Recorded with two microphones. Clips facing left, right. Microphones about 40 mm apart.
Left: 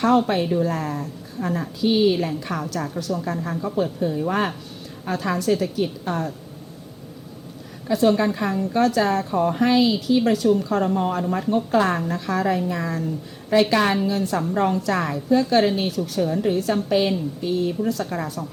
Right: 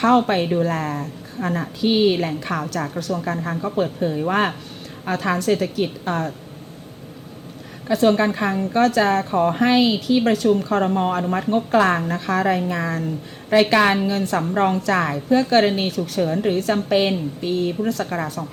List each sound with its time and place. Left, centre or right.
0.0 s a woman's voice: right
7.9 s a woman's voice: right